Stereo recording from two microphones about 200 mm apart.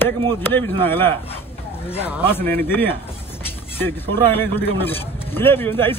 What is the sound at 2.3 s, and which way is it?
Speech, 10° left (ahead or behind).